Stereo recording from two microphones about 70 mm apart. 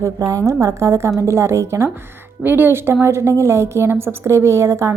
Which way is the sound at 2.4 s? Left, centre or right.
Right.